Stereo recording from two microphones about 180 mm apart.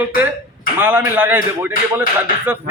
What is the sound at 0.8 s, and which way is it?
A man's voice, 10° right (ahead or behind).